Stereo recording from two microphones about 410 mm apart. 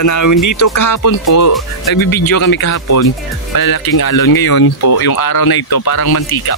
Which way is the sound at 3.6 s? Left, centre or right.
Left.